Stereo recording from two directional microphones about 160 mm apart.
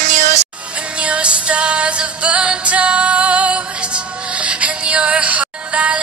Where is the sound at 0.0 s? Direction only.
50° right (ahead or behind).